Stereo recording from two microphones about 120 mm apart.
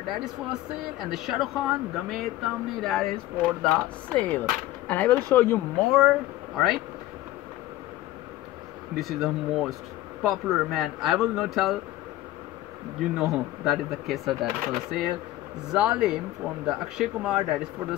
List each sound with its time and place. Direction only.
0.0 s speech: 5° right (ahead or behind); by 5.6 s 15° left (ahead or behind)
5.9 s speech: centre (ahead or behind)
9.0 s speech: centre (ahead or behind)
13.2 s speech: centre (ahead or behind)